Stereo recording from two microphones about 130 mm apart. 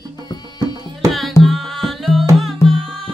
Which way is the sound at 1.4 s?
Centre (ahead or behind).